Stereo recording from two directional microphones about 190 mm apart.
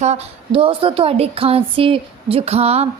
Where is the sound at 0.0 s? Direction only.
35° right (ahead or behind).